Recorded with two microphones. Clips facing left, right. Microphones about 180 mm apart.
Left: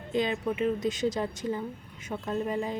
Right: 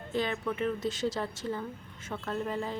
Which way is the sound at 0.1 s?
15° left (ahead or behind).